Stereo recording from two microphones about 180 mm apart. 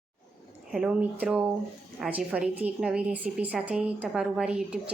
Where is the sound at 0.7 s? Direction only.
5° right (ahead or behind).